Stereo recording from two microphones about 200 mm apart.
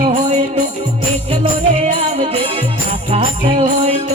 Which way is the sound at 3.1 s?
30° right (ahead or behind).